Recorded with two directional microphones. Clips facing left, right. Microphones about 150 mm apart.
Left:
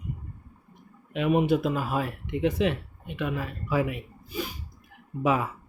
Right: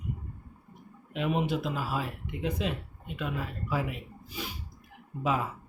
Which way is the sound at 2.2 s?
80° left.